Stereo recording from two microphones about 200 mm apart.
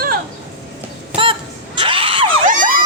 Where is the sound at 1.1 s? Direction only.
25° right (ahead or behind).